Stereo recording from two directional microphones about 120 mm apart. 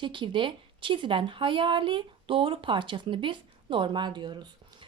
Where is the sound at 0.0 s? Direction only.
45° right (ahead or behind).